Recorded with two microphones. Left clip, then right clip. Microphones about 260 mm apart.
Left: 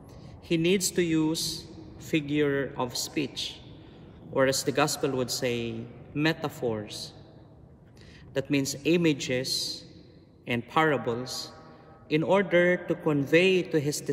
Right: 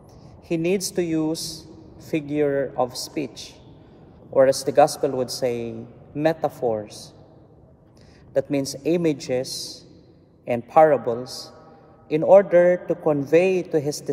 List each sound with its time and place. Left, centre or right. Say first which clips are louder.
0.5 s a man's voice: right 2 dB; centre
4.4 s a man's voice: right 9 dB; centre
8.3 s a man's voice: right 6 dB; centre
9.5 s a man's voice: left 2 dB; left
10.8 s a man's voice: right 10 dB; centre